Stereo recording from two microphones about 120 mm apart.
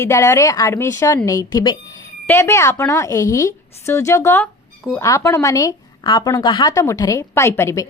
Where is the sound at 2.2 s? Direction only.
20° left (ahead or behind).